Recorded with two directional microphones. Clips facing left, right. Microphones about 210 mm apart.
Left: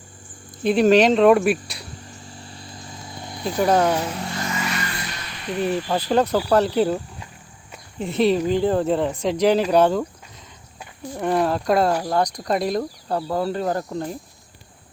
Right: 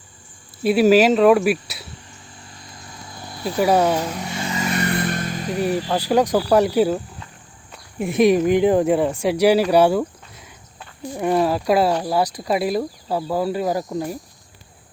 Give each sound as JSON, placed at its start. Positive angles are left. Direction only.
{"t": 0.6, "sound": "speech", "side_deg": -5}
{"t": 3.4, "sound": "speech", "side_deg": -5}
{"t": 4.3, "sound": "vehicle", "side_deg": -20}
{"t": 4.6, "sound": "vehicle", "side_deg": -50}
{"t": 5.6, "sound": "speech", "side_deg": -10}
{"t": 11.2, "sound": "speech", "side_deg": -5}